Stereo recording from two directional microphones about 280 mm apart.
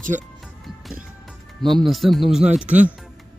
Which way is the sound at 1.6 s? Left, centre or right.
Centre.